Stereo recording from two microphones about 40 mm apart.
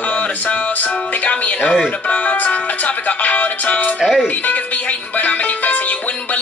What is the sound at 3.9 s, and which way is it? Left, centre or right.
Speech, centre.